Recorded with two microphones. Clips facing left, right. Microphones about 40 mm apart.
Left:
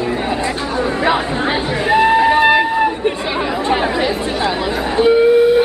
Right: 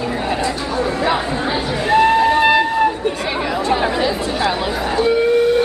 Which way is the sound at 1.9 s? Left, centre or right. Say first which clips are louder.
Left 1 dB; centre.